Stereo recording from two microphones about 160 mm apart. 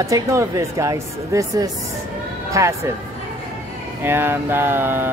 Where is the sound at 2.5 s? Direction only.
20° right (ahead or behind).